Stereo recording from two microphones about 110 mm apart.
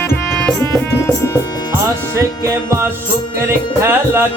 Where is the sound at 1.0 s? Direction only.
25° left (ahead or behind).